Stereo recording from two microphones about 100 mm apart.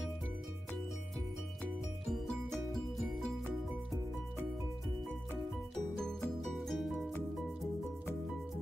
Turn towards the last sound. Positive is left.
turn(degrees=0)  # may be behind; listen again after turning